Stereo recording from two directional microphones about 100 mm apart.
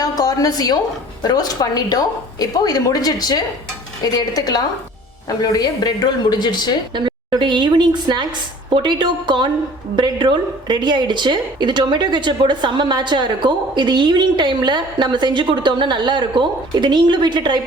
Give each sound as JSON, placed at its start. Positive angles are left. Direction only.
{"t": 0.0, "sound": "a sound", "side_deg": 40}
{"t": 1.2, "sound": "a woman's voice", "side_deg": 45}
{"t": 6.9, "sound": "a woman's voice", "side_deg": -50}